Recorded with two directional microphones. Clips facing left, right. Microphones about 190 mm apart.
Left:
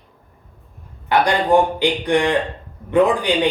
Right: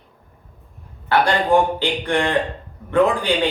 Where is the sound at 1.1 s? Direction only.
15° left (ahead or behind).